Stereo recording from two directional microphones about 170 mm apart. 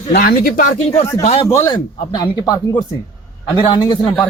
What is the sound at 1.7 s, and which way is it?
Speech, 30° left (ahead or behind).